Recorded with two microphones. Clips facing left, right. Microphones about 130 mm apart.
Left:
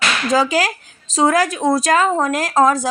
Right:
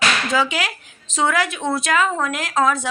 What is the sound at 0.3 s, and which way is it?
A woman's voice, 40° left (ahead or behind).